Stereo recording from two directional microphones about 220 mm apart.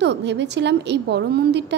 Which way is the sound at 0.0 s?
50° right (ahead or behind).